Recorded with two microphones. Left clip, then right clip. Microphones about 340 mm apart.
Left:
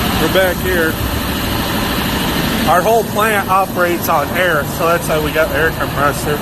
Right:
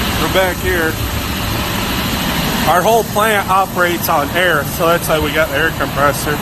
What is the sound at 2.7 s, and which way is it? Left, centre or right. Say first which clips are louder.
Speech: even; centre.